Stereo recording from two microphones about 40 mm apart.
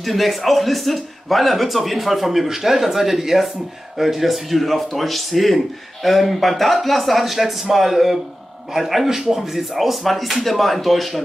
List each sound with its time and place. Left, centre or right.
0.0 s speech: centre